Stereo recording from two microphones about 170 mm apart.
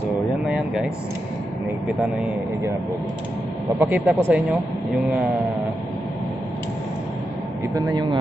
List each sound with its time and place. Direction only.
0.5 s air conditioning: 5° right (ahead or behind)
3.8 s speech: 5° right (ahead or behind)
7.7 s a man's voice: 25° right (ahead or behind)